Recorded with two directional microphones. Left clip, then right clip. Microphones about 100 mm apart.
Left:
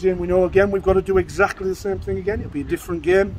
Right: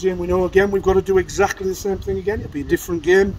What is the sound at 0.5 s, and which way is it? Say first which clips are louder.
Speech: right 1 dB; 30° left (ahead or behind).